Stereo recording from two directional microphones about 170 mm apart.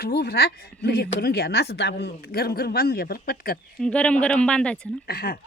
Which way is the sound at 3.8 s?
5° left (ahead or behind).